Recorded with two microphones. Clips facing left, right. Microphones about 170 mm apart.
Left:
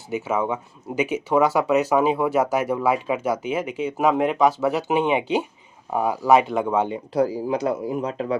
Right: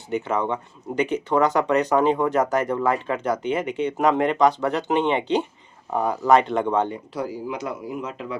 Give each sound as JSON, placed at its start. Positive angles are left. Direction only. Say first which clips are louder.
{"t": 0.1, "sound": "speech", "louder": "even", "side_deg": 5}
{"t": 7.4, "sound": "speech", "louder": "left 6 dB", "side_deg": 35}